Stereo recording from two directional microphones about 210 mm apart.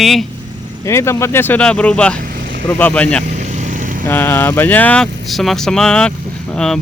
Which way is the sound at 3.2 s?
35° right (ahead or behind).